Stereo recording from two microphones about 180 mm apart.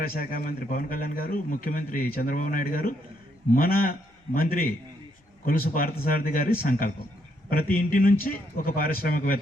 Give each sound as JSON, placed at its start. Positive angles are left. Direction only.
{"t": 0.0, "sound": "a man's voice", "side_deg": 55}